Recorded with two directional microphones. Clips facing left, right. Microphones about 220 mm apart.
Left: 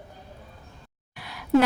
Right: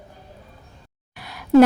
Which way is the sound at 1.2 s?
45° right (ahead or behind).